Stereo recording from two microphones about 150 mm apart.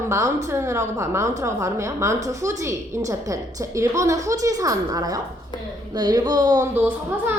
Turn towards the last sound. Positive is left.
turn(degrees=-15)  # may be behind; listen again after turning